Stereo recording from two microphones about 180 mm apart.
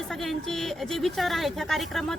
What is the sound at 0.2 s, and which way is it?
A woman's voice, centre (ahead or behind).